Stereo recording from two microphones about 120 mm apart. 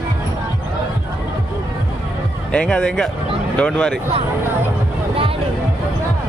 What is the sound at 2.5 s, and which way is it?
Speech, 10° left (ahead or behind).